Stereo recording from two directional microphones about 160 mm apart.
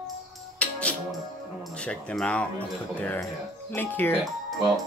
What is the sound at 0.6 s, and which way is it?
Music, 10° left (ahead or behind).